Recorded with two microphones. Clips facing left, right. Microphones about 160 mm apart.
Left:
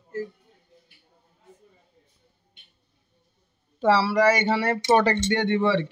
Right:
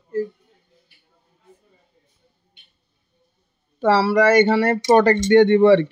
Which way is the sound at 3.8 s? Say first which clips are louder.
Right 3 dB; 50° right (ahead or behind).